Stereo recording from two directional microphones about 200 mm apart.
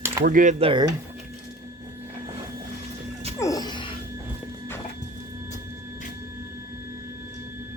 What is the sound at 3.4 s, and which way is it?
Music, 20° left (ahead or behind).